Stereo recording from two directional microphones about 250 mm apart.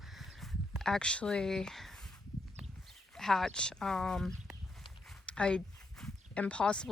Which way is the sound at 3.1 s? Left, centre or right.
Centre.